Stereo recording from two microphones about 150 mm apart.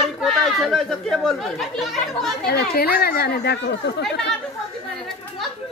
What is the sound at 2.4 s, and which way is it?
Speech, 90° left.